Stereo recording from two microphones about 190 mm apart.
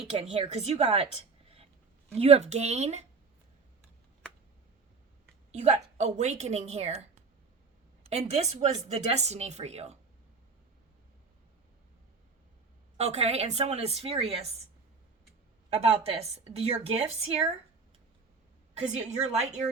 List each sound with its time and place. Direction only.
0.1 s speech: 30° right (ahead or behind)
2.1 s speech: 35° right (ahead or behind)
5.5 s a woman's voice: 35° right (ahead or behind)
13.0 s speech: 35° right (ahead or behind)
15.7 s speech: 30° right (ahead or behind)
18.8 s speech: 35° right (ahead or behind)